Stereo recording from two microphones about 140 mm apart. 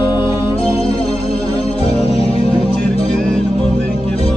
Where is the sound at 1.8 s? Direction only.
45° left (ahead or behind).